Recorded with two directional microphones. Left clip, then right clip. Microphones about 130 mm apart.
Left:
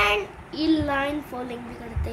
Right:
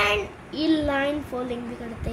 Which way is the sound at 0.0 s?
5° left (ahead or behind).